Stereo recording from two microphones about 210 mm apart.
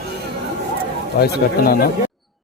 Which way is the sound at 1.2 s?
45° left (ahead or behind).